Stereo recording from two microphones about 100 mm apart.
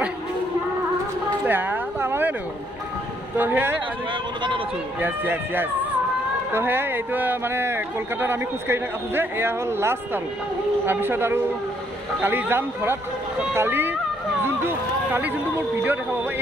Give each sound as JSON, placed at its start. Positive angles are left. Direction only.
{"t": 1.4, "sound": "a sound", "side_deg": -20}
{"t": 3.3, "sound": "speech", "side_deg": -20}
{"t": 5.0, "sound": "speech", "side_deg": -20}